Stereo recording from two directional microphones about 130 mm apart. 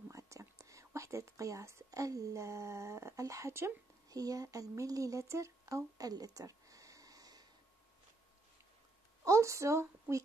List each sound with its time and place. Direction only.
0.1 s speech: 25° right (ahead or behind)
9.2 s a woman's voice: 25° right (ahead or behind)